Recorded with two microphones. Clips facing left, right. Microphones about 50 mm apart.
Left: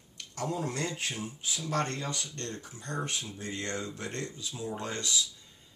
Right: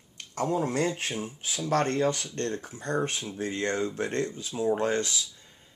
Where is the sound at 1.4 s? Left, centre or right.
Right.